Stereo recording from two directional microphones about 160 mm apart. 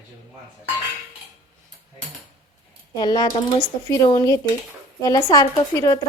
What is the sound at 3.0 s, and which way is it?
A woman's voice, 25° left (ahead or behind).